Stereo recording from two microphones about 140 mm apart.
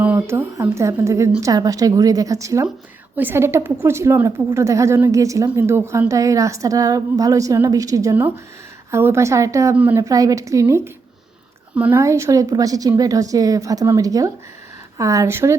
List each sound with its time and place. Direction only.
0.0 s a woman's voice: 15° right (ahead or behind)
10.0 s a woman's voice: 25° right (ahead or behind)